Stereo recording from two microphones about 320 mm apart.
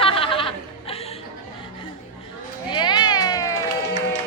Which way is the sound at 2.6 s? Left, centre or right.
Centre.